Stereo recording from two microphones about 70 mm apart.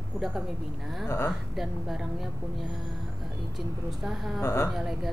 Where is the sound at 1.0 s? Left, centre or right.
Left.